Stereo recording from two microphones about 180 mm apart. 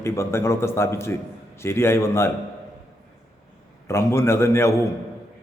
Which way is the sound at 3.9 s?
15° left (ahead or behind).